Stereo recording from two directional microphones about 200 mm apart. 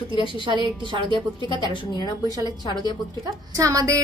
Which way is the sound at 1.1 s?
25° left (ahead or behind).